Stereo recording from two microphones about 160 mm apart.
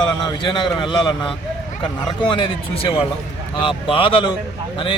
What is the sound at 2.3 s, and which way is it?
Speech, 30° left (ahead or behind).